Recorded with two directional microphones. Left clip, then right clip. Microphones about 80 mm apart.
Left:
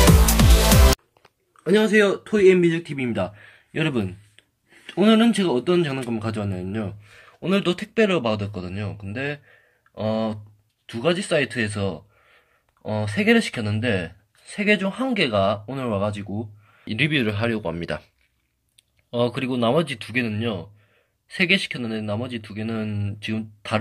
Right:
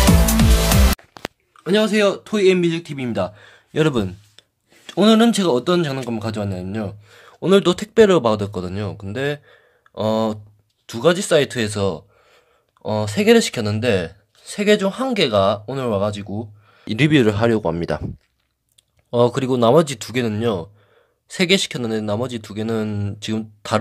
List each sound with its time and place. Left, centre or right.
1.6 s speech: centre
3.4 s speech: right
6.0 s speech: right
7.2 s speech: right
16.8 s speech: right
19.0 s speech: right
21.3 s speech: right